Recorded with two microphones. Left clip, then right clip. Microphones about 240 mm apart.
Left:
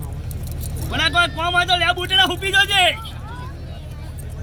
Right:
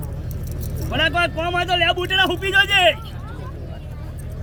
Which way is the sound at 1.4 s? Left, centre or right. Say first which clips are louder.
Left 2 dB; centre.